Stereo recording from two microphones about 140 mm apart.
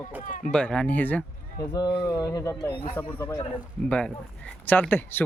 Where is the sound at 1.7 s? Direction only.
30° left (ahead or behind).